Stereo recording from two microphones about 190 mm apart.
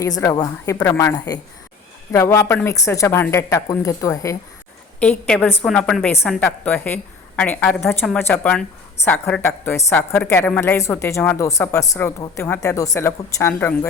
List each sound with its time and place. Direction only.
0.2 s a woman's voice: 20° left (ahead or behind)
4.9 s a woman's voice: 5° left (ahead or behind)